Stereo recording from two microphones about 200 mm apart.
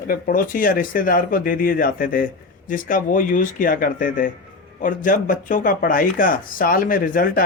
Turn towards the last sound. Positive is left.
turn(degrees=45)  # may be behind; listen again after turning